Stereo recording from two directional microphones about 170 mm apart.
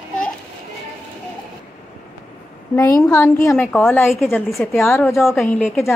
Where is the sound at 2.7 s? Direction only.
20° left (ahead or behind).